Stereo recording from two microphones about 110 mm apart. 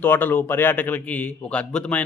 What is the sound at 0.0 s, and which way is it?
A man's voice, 15° left (ahead or behind).